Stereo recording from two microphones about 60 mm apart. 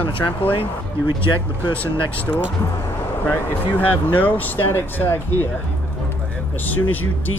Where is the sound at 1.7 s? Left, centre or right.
Left.